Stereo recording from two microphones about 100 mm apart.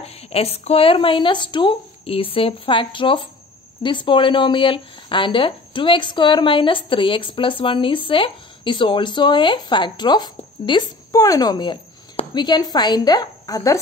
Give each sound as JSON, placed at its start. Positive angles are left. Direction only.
{"t": 0.0, "sound": "speech", "side_deg": 90}
{"t": 11.1, "sound": "a woman's voice", "side_deg": 35}